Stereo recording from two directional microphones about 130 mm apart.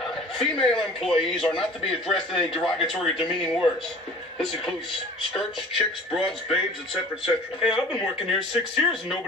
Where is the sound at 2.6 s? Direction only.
Centre (ahead or behind).